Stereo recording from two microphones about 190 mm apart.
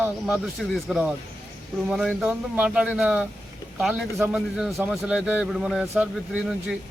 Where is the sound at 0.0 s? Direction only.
Centre (ahead or behind).